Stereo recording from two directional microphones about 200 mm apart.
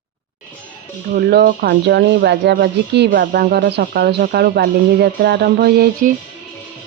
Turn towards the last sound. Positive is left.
turn(degrees=-45)  # may be behind; listen again after turning